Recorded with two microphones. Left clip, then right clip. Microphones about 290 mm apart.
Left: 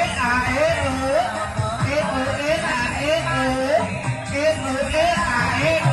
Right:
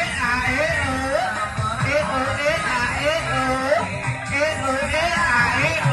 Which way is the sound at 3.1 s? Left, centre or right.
Right.